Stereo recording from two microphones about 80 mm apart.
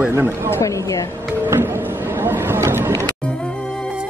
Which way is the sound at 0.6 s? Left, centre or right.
Left.